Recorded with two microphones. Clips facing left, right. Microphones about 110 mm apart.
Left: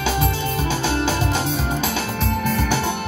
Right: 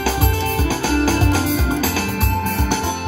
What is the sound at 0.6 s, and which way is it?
Music, 25° left (ahead or behind).